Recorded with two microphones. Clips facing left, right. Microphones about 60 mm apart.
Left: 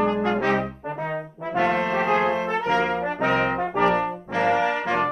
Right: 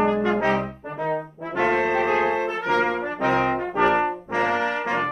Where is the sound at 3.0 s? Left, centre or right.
Left.